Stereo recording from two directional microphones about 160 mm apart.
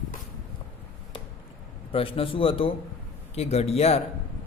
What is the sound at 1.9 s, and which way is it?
A man's voice, 35° left (ahead or behind).